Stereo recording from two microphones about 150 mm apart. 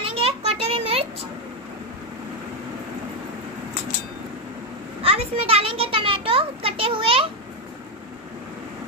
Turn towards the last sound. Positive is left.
turn(degrees=-35)  # may be behind; listen again after turning